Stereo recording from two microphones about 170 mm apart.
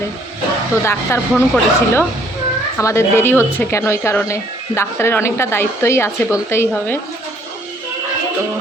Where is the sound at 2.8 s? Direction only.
15° left (ahead or behind).